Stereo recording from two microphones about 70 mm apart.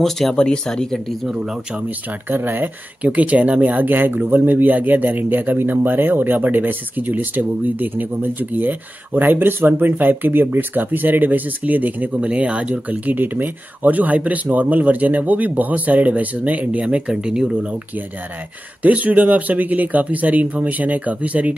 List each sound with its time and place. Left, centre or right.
0.0 s speech: centre
1.3 s speech: centre
1.9 s speech: right; by 17.7 s centre
18.8 s speech: right